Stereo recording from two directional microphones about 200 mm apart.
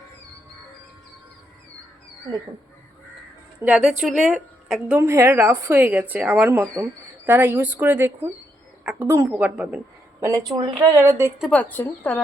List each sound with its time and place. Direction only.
3.6 s a woman's voice: 5° right (ahead or behind); by 10.9 s 25° right (ahead or behind)
10.9 s a woman's voice: 15° right (ahead or behind)
11.3 s a woman's voice: centre (ahead or behind)